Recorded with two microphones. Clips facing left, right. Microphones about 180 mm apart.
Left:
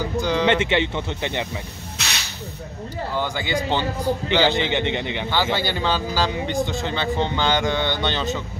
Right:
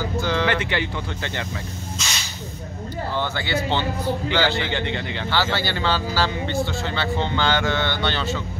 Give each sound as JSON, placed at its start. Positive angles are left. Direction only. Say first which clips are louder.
{"t": 0.2, "sound": "speech", "louder": "left 3 dB", "side_deg": 15}
{"t": 2.0, "sound": "hiss", "louder": "left 3 dB", "side_deg": 65}
{"t": 3.2, "sound": "a man's voice", "louder": "left 1 dB", "side_deg": 15}